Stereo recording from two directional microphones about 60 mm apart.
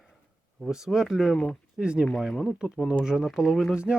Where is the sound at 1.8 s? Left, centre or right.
Centre.